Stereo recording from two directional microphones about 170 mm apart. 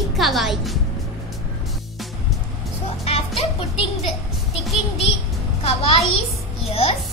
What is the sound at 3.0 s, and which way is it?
Music, 35° left (ahead or behind).